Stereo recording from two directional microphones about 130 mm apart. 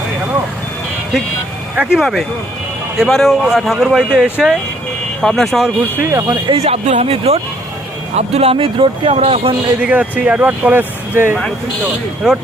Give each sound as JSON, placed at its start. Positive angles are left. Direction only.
{"t": 1.7, "sound": "speech", "side_deg": -10}
{"t": 6.0, "sound": "speech", "side_deg": -20}
{"t": 6.5, "sound": "speech", "side_deg": -50}
{"t": 9.8, "sound": "speech", "side_deg": -10}
{"t": 12.2, "sound": "speech", "side_deg": -5}